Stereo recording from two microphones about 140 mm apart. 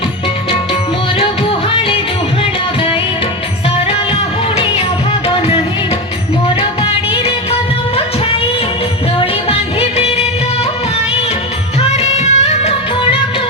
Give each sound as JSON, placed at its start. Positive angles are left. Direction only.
{"t": 2.4, "sound": "music", "side_deg": 40}
{"t": 9.1, "sound": "music", "side_deg": 40}
{"t": 11.8, "sound": "music", "side_deg": 45}